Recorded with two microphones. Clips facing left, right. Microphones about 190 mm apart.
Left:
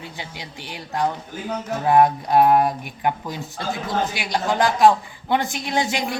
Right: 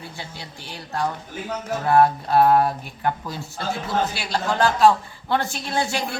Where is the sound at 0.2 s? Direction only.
15° left (ahead or behind).